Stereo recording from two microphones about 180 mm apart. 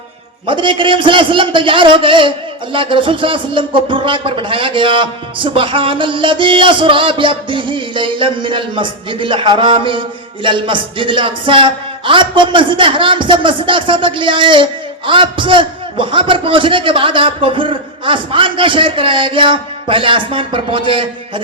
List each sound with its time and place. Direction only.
0.4 s a man's voice: 30° right (ahead or behind)